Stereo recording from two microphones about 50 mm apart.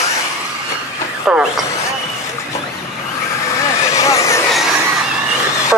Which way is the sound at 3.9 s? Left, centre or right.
Left.